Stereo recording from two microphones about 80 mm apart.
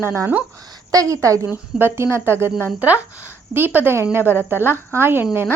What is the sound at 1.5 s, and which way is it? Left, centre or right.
A woman's voice, right.